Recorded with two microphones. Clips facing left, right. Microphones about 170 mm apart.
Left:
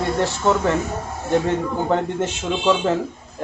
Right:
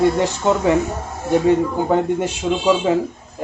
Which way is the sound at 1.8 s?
10° right (ahead or behind).